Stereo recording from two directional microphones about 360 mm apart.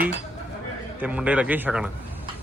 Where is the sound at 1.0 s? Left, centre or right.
Centre.